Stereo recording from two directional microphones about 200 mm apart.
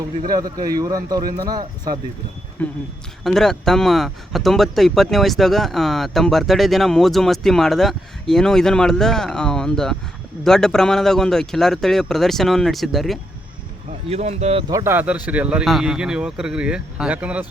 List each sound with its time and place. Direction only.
0.6 s speech: 20° right (ahead or behind)
2.6 s speech: 10° left (ahead or behind)
14.1 s speech: 35° right (ahead or behind)
14.7 s speech: 15° right (ahead or behind)